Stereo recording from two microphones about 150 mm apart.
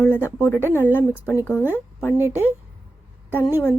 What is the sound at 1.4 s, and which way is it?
Speech, 15° left (ahead or behind).